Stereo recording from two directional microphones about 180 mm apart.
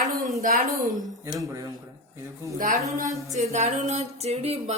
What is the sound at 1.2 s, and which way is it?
Speech, 15° right (ahead or behind).